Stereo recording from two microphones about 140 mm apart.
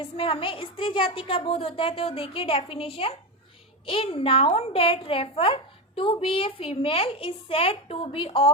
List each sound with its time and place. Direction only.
0.0 s a woman's voice: 40° left (ahead or behind)